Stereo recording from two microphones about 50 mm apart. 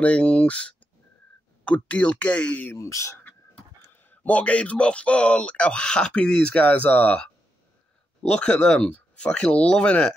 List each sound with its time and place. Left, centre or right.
0.0 s speech: left
2.8 s speech: left
4.1 s speech: left
6.5 s speech: left
8.2 s speech: centre